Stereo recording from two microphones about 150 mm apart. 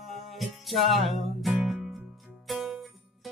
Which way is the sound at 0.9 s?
Centre (ahead or behind).